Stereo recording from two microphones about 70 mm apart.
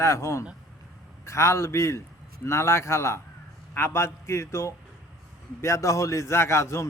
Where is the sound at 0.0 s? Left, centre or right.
Left.